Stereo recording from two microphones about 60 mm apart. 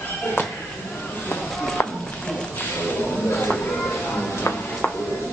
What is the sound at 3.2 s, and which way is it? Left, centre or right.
Cat, left.